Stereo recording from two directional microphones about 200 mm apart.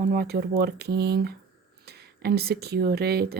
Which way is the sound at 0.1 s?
55° right (ahead or behind).